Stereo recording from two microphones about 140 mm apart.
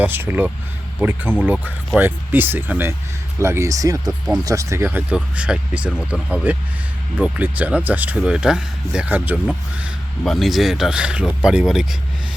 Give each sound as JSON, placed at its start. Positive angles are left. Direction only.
{"t": 0.0, "sound": "speech", "side_deg": -15}